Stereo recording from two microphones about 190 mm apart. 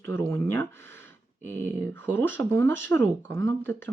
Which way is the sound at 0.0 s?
15° left (ahead or behind).